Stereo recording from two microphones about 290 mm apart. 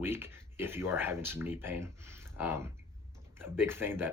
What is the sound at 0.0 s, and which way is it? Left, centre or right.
Speech, centre.